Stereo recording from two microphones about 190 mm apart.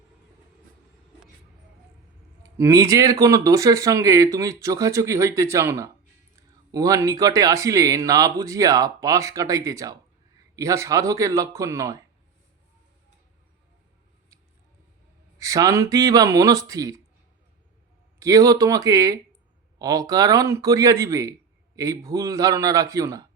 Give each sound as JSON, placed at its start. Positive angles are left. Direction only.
{"t": 2.4, "sound": "speech", "side_deg": -15}
{"t": 15.4, "sound": "speech", "side_deg": -15}
{"t": 18.2, "sound": "speech", "side_deg": -20}